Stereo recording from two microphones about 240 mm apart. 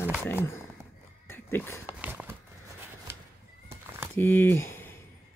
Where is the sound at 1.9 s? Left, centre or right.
Centre.